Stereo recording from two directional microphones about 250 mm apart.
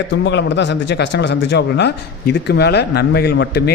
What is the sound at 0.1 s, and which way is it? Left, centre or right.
Speech, left.